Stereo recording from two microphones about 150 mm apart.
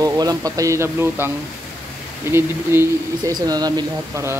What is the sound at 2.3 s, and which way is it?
Speech, 15° right (ahead or behind).